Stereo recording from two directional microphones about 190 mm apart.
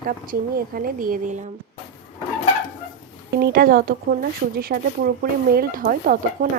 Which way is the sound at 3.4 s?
50° right (ahead or behind).